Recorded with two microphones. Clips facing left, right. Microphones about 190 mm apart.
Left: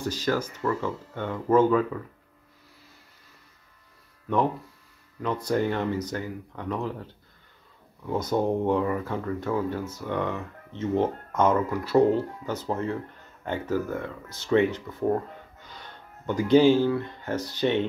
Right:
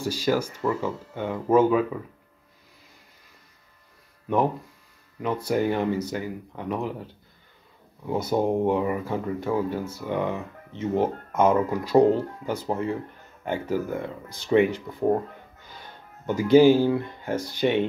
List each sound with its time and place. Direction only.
0.0 s speech: 10° right (ahead or behind)
5.2 s speech: 10° right (ahead or behind)
8.1 s speech: 10° right (ahead or behind)
15.7 s music: 5° right (ahead or behind)
16.9 s speech: 10° right (ahead or behind)